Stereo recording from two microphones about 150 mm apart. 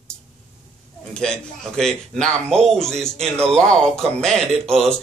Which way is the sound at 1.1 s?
5° left (ahead or behind).